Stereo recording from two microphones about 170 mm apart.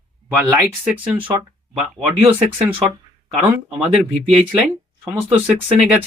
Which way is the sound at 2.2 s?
10° right (ahead or behind).